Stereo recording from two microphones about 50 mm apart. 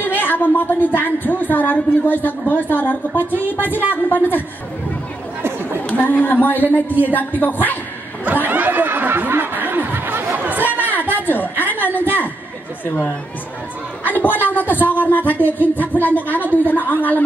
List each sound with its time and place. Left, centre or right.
0.0 s a woman's voice: left
5.9 s a woman's voice: left
8.3 s snicker: right
10.6 s a sound: left
14.0 s a woman's voice: left